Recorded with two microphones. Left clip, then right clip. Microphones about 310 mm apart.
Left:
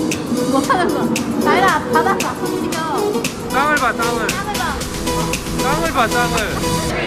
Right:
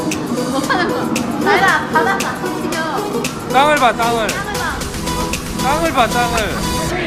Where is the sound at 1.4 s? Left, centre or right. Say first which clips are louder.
Right 1 dB; left.